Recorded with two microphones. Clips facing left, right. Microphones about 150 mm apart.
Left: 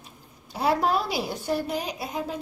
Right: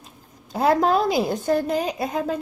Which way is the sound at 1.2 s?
50° right (ahead or behind).